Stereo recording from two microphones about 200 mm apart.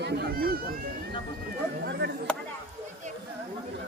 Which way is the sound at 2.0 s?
60° right (ahead or behind).